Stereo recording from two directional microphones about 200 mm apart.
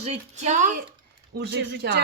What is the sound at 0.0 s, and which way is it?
Speech, 35° right (ahead or behind).